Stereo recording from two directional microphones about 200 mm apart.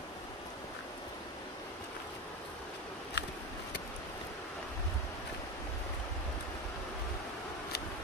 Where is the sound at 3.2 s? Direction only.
60° left (ahead or behind).